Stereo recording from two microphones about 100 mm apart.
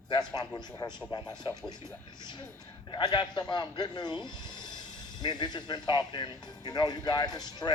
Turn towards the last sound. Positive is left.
turn(degrees=45)  # may be behind; listen again after turning